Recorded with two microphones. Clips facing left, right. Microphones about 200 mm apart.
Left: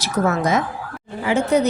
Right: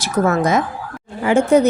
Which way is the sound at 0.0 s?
50° right (ahead or behind).